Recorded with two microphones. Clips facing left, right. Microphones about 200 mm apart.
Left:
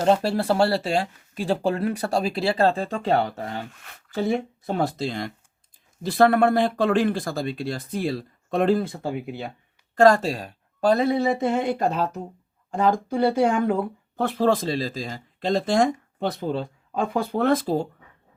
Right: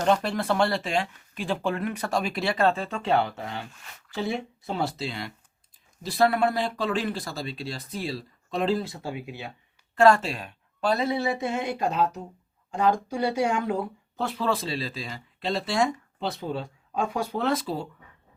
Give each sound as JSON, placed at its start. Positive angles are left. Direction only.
{"t": 0.0, "sound": "speech", "side_deg": 30}
{"t": 9.9, "sound": "speech", "side_deg": 40}